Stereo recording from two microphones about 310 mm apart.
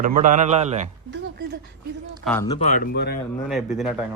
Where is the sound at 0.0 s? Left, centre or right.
Right.